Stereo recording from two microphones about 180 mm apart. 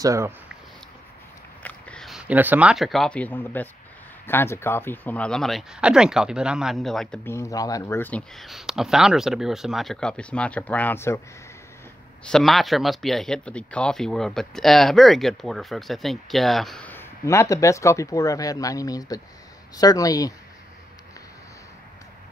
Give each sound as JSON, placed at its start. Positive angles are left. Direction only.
{"t": 0.0, "sound": "speech", "side_deg": -15}
{"t": 1.6, "sound": "speech", "side_deg": 5}
{"t": 7.2, "sound": "speech", "side_deg": 15}
{"t": 12.3, "sound": "speech", "side_deg": 0}